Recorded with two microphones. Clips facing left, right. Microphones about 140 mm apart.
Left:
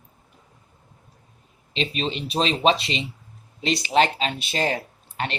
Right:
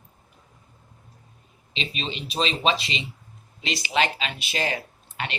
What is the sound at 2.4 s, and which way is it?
Speech, 50° left (ahead or behind).